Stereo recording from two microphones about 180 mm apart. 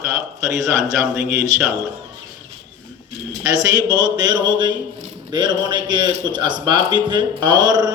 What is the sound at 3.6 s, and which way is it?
A man's voice, 25° right (ahead or behind).